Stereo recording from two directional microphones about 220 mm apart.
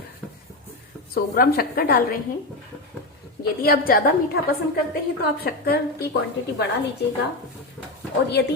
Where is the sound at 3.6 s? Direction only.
40° left (ahead or behind).